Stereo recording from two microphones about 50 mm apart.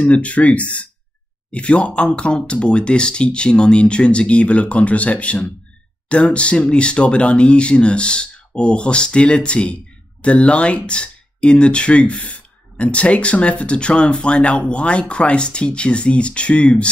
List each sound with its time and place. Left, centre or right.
0.0 s speech: left